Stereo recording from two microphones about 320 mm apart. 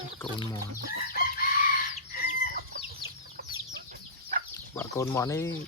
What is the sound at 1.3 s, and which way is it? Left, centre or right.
Chicken, left.